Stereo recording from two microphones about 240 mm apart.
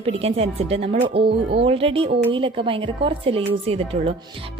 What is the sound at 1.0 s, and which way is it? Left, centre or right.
Music, right.